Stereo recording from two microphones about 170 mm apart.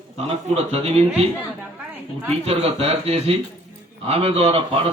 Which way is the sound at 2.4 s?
35° right (ahead or behind).